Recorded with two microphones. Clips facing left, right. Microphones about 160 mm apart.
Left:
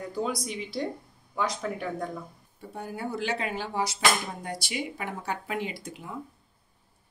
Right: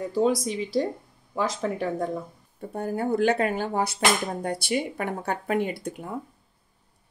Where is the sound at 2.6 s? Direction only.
50° right (ahead or behind).